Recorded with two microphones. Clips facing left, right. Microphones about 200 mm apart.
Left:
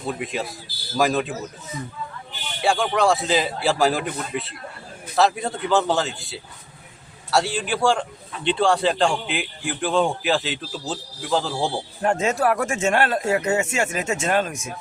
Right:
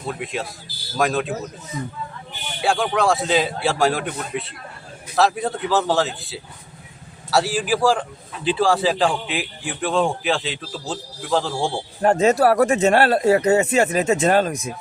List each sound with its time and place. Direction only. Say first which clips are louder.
0.1 s a man's voice: even; centre (ahead or behind)
2.6 s a man's voice: even; centre (ahead or behind)
12.0 s speech: right 5 dB; 35° right (ahead or behind)